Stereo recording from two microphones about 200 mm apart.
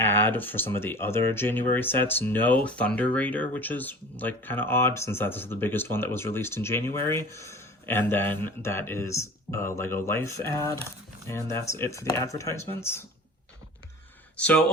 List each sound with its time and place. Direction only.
0.0 s speech: 10° left (ahead or behind)
14.3 s speech: 5° left (ahead or behind)